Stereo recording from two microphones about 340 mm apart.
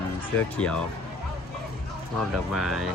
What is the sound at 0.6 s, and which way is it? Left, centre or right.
Speech, centre.